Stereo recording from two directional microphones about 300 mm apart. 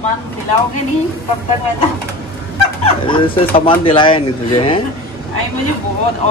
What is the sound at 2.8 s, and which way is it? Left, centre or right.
Speech, centre.